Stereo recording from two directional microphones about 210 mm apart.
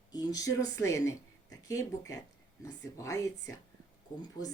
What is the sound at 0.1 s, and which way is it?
A woman's voice, 20° left (ahead or behind).